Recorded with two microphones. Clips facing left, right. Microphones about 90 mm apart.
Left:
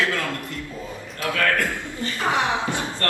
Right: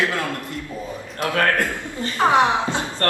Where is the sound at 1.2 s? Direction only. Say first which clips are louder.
Right 3 dB; 35° right (ahead or behind).